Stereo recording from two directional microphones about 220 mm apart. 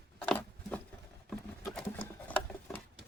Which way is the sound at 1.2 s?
5° left (ahead or behind).